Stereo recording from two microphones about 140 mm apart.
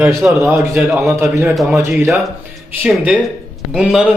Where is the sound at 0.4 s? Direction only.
15° right (ahead or behind).